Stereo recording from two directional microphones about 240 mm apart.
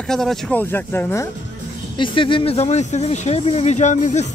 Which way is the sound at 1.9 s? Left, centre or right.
Left.